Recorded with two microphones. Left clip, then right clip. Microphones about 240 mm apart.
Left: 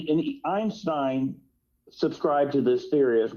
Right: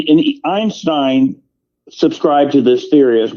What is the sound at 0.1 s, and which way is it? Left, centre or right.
A man's voice, right.